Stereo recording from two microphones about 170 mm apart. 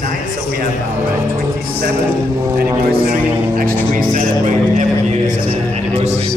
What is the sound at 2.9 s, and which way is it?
A man's voice, 60° right (ahead or behind).